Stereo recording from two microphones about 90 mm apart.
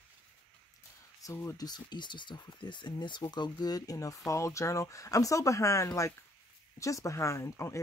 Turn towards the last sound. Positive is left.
turn(degrees=30)  # may be behind; listen again after turning